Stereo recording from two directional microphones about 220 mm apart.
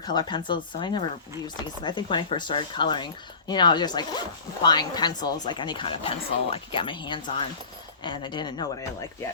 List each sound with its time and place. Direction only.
0.1 s speech: 20° left (ahead or behind)